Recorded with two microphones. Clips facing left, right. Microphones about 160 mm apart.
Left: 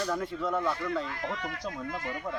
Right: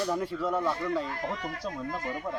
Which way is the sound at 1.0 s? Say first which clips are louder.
Right 1 dB; 35° right (ahead or behind).